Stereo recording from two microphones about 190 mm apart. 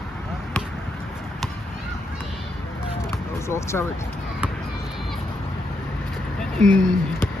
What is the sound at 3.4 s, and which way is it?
Speech, 15° left (ahead or behind).